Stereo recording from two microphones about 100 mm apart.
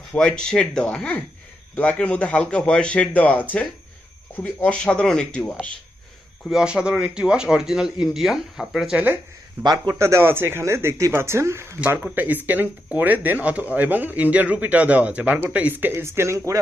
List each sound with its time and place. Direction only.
0.1 s a man's voice: 10° left (ahead or behind)
6.4 s speech: 5° right (ahead or behind)
9.6 s a man's voice: 45° right (ahead or behind)
9.9 s speech: 25° right (ahead or behind)